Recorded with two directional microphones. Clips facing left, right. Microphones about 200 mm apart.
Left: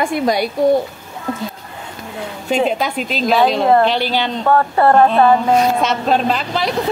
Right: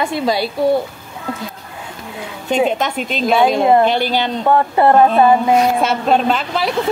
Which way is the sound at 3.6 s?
15° right (ahead or behind).